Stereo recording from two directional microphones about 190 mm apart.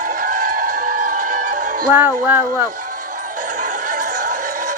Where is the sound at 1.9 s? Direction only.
10° right (ahead or behind).